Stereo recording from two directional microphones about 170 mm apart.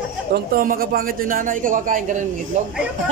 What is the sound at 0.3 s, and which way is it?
A man's voice, 55° right (ahead or behind).